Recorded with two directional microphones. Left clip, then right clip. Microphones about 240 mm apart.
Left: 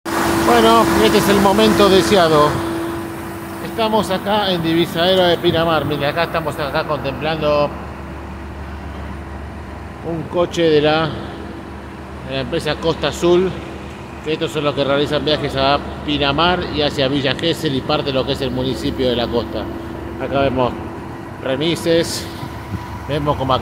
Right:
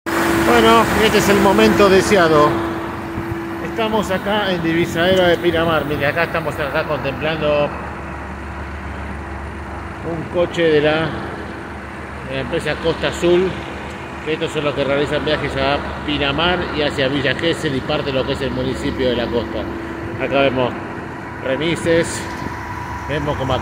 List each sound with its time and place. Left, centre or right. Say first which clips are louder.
0.5 s speech: left 1 dB; centre
3.7 s speech: left 2 dB; centre
10.3 s speech: left 1 dB; centre
12.3 s speech: left 1 dB; centre
20.2 s speech: right 2 dB; centre
21.5 s speech: even; centre
23.0 s speech: left 3 dB; left